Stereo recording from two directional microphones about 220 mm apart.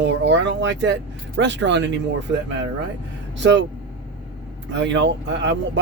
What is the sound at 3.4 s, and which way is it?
Speech, 55° right (ahead or behind).